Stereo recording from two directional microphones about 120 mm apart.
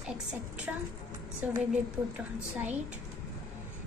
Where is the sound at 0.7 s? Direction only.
15° right (ahead or behind).